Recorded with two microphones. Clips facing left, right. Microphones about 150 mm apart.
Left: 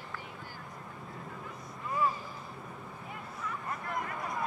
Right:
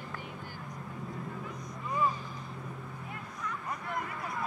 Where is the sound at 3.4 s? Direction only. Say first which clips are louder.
Even; centre (ahead or behind).